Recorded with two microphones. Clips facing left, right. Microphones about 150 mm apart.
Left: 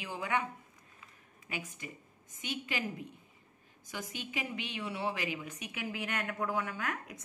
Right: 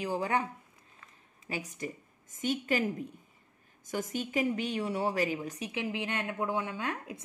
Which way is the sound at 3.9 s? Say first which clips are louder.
Right 8 dB; 45° right (ahead or behind).